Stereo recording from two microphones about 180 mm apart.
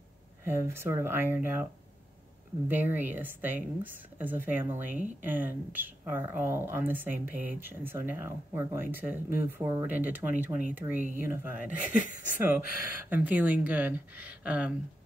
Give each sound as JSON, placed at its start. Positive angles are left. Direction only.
{"t": 0.4, "sound": "speech", "side_deg": -15}
{"t": 2.7, "sound": "speech", "side_deg": -10}